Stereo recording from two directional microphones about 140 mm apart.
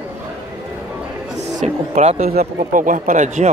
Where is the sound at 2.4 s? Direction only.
70° right (ahead or behind).